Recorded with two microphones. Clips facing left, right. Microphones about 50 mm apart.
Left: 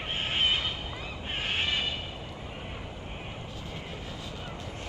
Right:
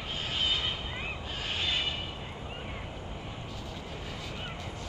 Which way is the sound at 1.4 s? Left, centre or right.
Left.